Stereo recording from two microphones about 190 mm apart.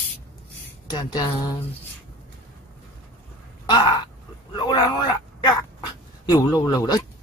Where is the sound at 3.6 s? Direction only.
25° left (ahead or behind).